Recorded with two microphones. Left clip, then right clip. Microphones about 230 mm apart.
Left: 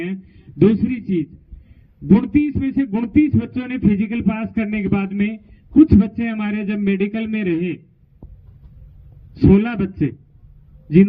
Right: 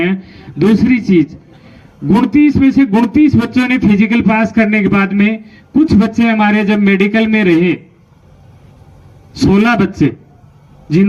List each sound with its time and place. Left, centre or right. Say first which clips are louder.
0.0 s speech: right 12 dB; right
9.3 s speech: right 6 dB; right